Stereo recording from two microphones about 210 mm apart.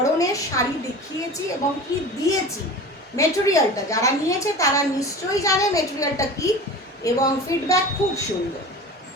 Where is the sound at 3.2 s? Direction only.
15° left (ahead or behind).